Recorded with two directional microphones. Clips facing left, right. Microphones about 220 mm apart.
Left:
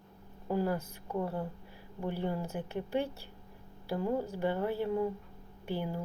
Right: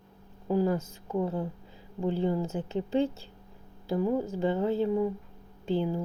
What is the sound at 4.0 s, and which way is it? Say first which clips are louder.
Speech: right 4 dB; 15° right (ahead or behind).